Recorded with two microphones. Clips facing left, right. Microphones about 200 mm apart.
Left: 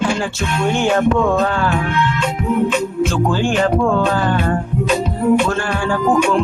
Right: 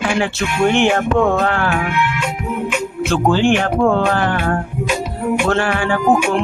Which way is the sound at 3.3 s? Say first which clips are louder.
Right 5 dB; 70° right (ahead or behind).